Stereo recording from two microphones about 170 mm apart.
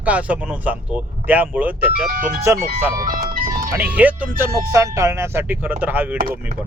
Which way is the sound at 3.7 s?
10° right (ahead or behind).